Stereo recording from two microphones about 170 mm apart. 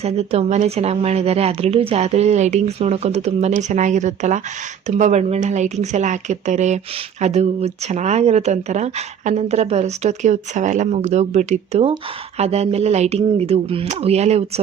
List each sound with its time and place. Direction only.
0.0 s a woman's voice: 40° right (ahead or behind)